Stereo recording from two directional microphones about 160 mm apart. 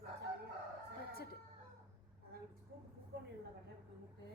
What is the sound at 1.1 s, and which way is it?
Chicken, 75° left (ahead or behind).